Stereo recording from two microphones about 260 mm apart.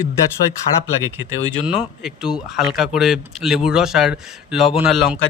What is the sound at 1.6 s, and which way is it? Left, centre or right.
Speech, centre.